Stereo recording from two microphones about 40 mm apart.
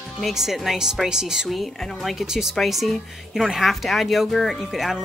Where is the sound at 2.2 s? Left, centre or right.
Centre.